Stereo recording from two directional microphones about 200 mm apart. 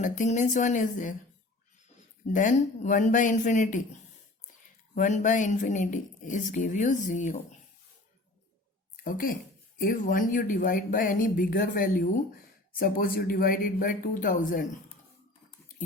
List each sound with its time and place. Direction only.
0.0 s speech: 40° left (ahead or behind)
2.2 s speech: 40° left (ahead or behind)
4.9 s speech: 40° left (ahead or behind)
9.0 s speech: 45° left (ahead or behind)